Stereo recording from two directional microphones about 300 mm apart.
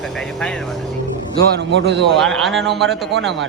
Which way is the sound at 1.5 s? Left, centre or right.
Right.